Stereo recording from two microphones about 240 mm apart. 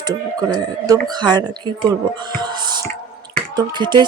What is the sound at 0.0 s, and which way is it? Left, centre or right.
Speech, centre.